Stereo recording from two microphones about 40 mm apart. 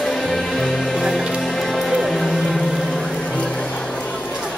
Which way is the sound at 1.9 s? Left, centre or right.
Centre.